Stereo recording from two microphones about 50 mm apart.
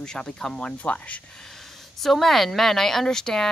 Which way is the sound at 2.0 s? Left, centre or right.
Centre.